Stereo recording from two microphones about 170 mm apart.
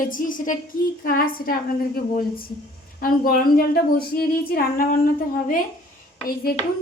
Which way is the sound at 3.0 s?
55° left (ahead or behind).